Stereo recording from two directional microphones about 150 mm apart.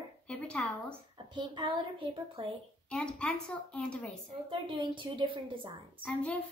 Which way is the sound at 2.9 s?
10° left (ahead or behind).